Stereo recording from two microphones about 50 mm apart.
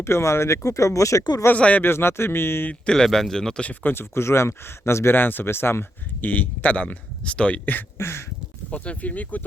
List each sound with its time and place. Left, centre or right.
0.0 s speech: left
1.5 s speech: left
1.8 s speech: left
2.8 s speech: centre
3.8 s speech: left
6.2 s speech: left
7.9 s a sound: left
8.7 s speech: left